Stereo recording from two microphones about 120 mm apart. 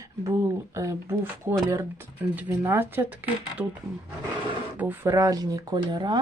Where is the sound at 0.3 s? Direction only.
25° right (ahead or behind).